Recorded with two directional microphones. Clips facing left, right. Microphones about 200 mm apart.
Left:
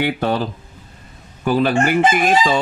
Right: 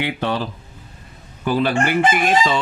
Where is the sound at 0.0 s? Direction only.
45° left (ahead or behind).